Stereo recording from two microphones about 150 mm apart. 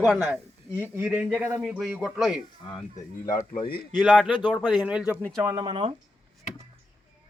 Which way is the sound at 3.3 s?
65° left (ahead or behind).